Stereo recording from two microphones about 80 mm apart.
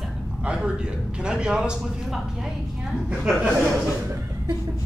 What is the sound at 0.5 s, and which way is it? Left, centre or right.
A man's voice, centre.